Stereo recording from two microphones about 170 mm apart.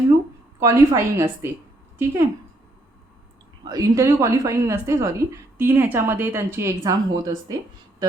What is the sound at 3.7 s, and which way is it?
A woman's voice, 20° right (ahead or behind).